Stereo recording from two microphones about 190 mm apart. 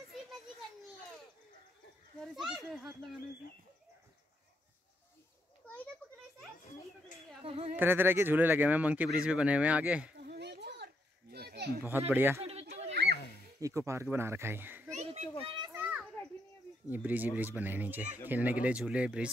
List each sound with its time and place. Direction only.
0.1 s children playing: centre (ahead or behind)
2.2 s speech: centre (ahead or behind)
7.4 s speech: 30° right (ahead or behind)
7.7 s speech: 10° right (ahead or behind)
10.2 s children playing: 60° right (ahead or behind)
12.1 s speech: 10° right (ahead or behind)
12.4 s children playing: 30° right (ahead or behind)
12.9 s a sound: 60° right (ahead or behind)
13.6 s speech: 15° right (ahead or behind)
14.9 s children playing: 35° right (ahead or behind)
15.7 s children playing: 10° right (ahead or behind)
16.9 s speech: 10° right (ahead or behind)